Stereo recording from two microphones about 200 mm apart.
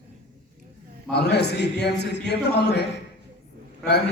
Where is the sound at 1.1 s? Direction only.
55° left (ahead or behind).